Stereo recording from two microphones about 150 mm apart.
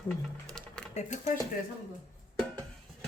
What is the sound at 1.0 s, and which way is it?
Speech, 55° left (ahead or behind).